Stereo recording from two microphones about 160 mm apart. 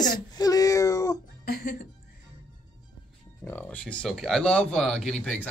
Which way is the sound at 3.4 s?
10° left (ahead or behind).